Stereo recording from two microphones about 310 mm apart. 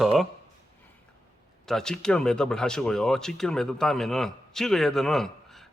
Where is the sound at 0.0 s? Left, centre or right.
Centre.